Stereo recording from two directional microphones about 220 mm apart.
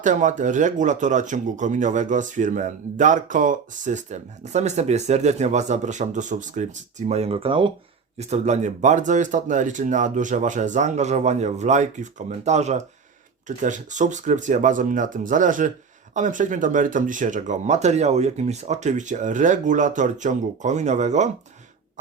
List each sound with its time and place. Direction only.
0.0 s speech: 35° right (ahead or behind)